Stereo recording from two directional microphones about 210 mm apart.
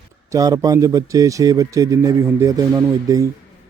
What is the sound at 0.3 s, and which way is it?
A man's voice, 15° right (ahead or behind).